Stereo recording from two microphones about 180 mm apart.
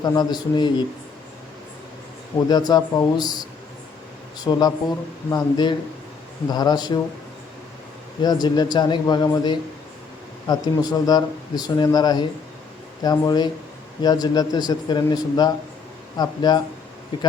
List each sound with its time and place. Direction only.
0.0 s speech: 25° left (ahead or behind)
2.5 s speech: 20° left (ahead or behind)
4.4 s speech: 20° left (ahead or behind)
8.2 s speech: 20° left (ahead or behind)